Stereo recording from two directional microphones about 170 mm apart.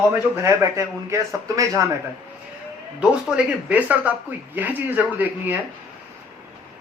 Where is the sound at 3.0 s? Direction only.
5° right (ahead or behind).